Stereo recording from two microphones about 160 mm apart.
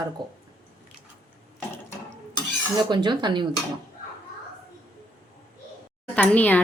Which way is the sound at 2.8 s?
30° right (ahead or behind).